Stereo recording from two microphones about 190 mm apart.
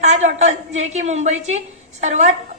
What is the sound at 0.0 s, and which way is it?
A woman's voice, 35° right (ahead or behind).